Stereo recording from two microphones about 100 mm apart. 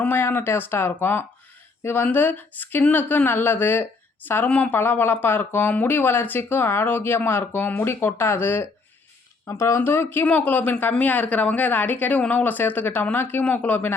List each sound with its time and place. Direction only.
0.0 s speech: 20° left (ahead or behind)